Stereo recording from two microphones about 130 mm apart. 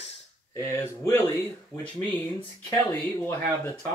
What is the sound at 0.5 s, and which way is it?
Speech, 20° left (ahead or behind).